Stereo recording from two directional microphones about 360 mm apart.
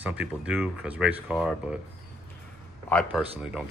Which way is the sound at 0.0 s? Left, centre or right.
Centre.